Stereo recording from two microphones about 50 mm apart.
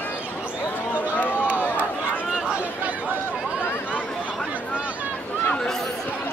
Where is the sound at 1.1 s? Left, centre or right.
Left.